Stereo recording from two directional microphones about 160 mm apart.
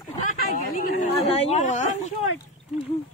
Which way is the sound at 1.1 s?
40° left (ahead or behind).